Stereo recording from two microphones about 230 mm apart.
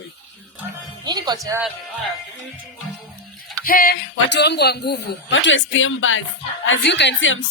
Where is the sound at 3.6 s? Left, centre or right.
Left.